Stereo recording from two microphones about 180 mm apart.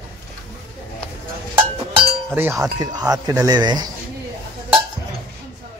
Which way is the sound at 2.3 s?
10° right (ahead or behind).